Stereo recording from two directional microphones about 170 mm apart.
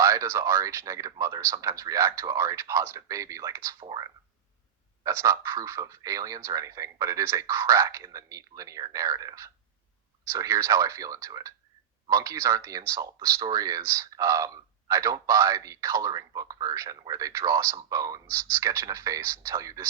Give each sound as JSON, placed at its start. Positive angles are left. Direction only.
{"t": 0.0, "sound": "speech", "side_deg": -15}